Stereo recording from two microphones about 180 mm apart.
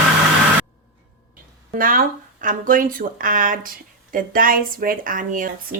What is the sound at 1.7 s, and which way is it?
Speech, 50° right (ahead or behind).